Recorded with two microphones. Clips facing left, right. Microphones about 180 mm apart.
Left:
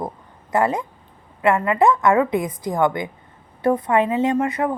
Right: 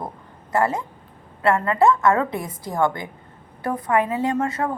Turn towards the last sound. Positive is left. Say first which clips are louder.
# left 3 dB
turn(degrees=15)  # may be behind; listen again after turning